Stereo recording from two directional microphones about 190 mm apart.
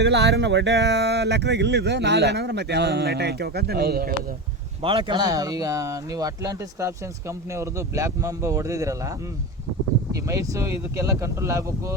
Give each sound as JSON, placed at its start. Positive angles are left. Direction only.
{"t": 0.0, "sound": "speech", "side_deg": -65}
{"t": 4.8, "sound": "speech", "side_deg": -30}
{"t": 10.2, "sound": "speech", "side_deg": -15}